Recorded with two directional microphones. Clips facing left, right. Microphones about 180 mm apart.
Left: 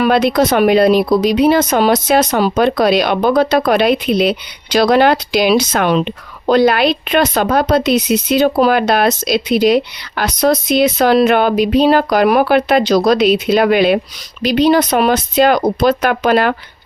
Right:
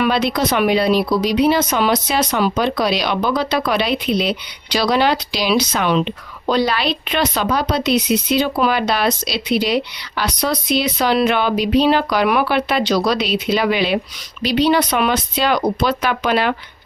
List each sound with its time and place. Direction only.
0.0 s speech: 50° left (ahead or behind)